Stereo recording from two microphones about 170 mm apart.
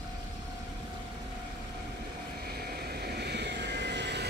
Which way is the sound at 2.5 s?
65° right (ahead or behind).